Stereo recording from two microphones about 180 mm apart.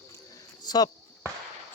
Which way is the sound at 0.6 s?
20° left (ahead or behind).